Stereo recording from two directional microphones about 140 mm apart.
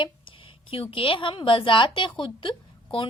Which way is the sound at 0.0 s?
40° left (ahead or behind).